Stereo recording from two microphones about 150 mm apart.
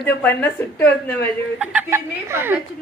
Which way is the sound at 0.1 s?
15° left (ahead or behind).